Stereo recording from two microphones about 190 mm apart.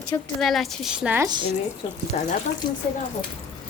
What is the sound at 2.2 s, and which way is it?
Speech, 35° left (ahead or behind).